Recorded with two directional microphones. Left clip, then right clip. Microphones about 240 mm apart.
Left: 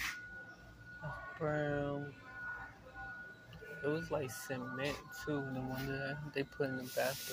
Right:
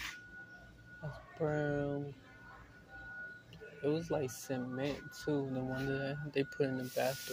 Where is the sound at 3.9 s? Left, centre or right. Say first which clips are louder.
Right 2 dB; right.